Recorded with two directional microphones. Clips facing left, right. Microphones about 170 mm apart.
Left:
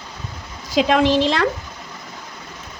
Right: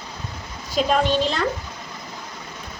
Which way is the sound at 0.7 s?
90° left.